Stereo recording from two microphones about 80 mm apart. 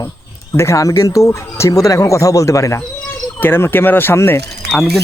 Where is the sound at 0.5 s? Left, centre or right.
Left.